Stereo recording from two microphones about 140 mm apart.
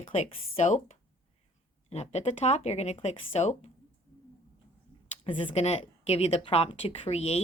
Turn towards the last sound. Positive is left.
turn(degrees=50)  # may be behind; listen again after turning